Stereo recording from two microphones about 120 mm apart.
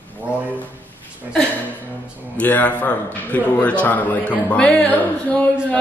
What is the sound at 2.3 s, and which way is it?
A man's voice, 15° left (ahead or behind).